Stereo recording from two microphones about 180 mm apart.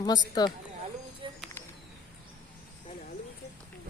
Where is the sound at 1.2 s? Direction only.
25° right (ahead or behind).